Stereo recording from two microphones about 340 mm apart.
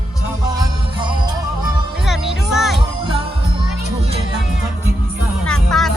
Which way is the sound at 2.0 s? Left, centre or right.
Centre.